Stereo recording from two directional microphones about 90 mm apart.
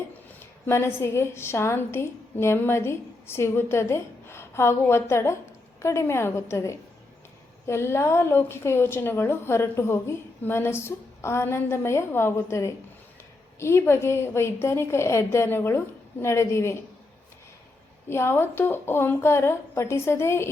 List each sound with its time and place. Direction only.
0.3 s a woman's voice: 25° left (ahead or behind)
18.1 s a woman's voice: 25° left (ahead or behind)